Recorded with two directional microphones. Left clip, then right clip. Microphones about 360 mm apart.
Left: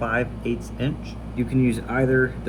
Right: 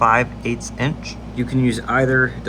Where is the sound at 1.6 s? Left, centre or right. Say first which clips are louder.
Right 2 dB; centre.